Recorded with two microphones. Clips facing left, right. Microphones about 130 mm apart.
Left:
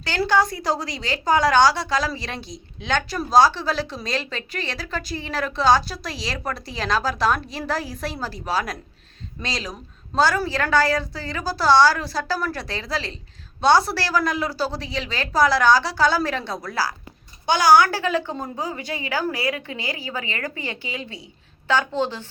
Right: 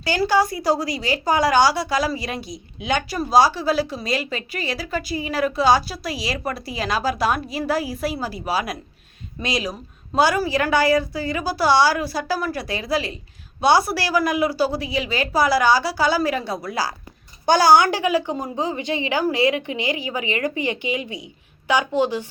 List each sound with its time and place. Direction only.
0.0 s a woman's voice: 10° right (ahead or behind)
17.4 s a child's voice: 40° right (ahead or behind)
17.7 s a woman's voice: 20° right (ahead or behind)